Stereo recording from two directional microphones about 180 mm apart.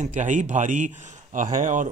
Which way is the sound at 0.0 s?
40° right (ahead or behind).